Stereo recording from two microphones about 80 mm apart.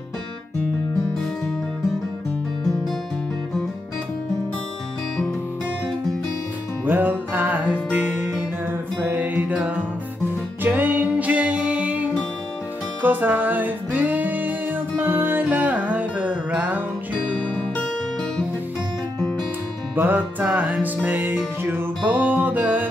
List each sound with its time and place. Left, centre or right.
6.9 s music: right
17.3 s music: centre
20.0 s music: right